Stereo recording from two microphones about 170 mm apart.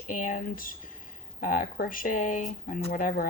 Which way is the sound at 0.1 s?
50° left (ahead or behind).